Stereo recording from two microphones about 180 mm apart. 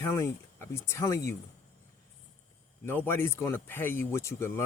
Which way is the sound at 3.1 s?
15° left (ahead or behind).